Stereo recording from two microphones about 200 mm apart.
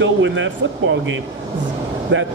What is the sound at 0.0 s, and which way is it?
Speech, 70° right (ahead or behind).